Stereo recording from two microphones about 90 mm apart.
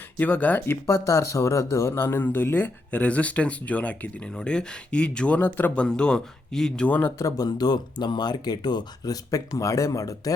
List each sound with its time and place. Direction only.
0.2 s speech: 15° left (ahead or behind)
0.9 s speech: 35° left (ahead or behind); by 6.8 s 5° left (ahead or behind)
6.8 s speech: 15° left (ahead or behind)
7.2 s speech: 40° left (ahead or behind)